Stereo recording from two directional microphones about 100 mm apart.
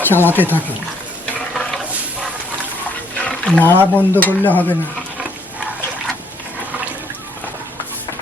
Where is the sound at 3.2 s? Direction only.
10° left (ahead or behind).